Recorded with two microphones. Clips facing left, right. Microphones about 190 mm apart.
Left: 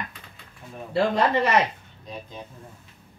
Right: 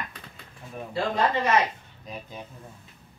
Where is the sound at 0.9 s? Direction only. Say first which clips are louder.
Left 4 dB; 70° left (ahead or behind).